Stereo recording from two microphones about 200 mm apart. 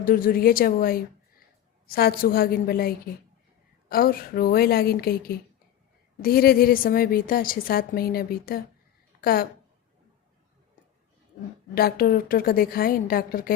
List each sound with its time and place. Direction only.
0.0 s a woman's voice: 45° left (ahead or behind)
11.7 s a woman's voice: 50° left (ahead or behind)